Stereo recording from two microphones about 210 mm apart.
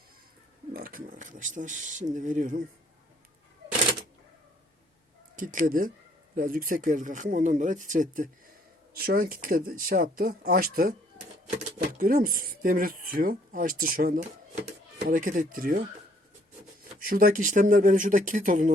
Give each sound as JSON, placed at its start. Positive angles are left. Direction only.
{"t": 0.7, "sound": "a sound", "side_deg": -45}
{"t": 2.1, "sound": "speech", "side_deg": -35}
{"t": 5.4, "sound": "speech", "side_deg": -40}
{"t": 17.0, "sound": "speech", "side_deg": -45}